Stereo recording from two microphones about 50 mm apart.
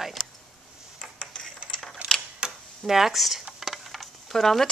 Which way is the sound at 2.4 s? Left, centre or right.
Centre.